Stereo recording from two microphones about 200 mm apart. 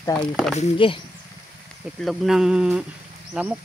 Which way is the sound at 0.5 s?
25° left (ahead or behind).